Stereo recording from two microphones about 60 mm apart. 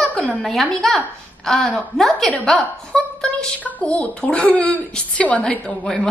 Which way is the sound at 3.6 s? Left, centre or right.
Left.